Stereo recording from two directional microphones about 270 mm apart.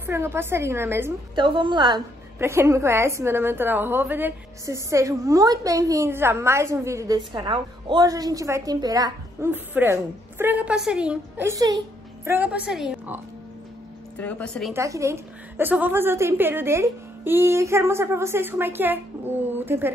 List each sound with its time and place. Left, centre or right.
0.0 s a woman's voice: centre
14.7 s a woman's voice: centre